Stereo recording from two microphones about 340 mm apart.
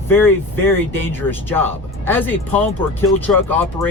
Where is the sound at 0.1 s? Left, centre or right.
Centre.